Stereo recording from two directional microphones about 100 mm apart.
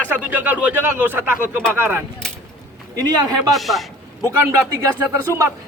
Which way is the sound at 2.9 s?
40° right (ahead or behind).